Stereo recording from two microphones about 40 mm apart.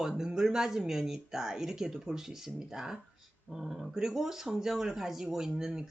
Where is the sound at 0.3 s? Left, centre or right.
Centre.